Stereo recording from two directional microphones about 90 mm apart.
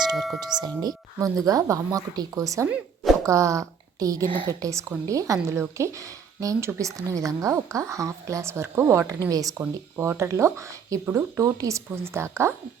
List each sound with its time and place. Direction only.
0.3 s a woman's voice: 50° right (ahead or behind)
11.9 s a woman's voice: 30° right (ahead or behind)